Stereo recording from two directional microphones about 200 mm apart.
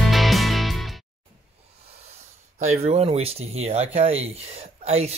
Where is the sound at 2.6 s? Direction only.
35° right (ahead or behind).